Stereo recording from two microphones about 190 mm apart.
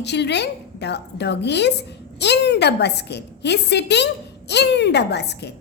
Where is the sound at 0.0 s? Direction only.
65° left (ahead or behind).